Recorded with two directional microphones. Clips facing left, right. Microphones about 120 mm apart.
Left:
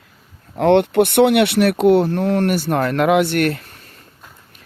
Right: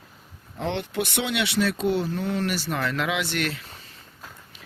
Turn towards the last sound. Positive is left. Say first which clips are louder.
# left 10 dB
turn(degrees=55)  # may be behind; listen again after turning